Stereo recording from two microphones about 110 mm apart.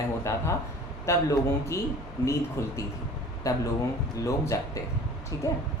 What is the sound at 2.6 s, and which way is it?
Speech, 25° left (ahead or behind).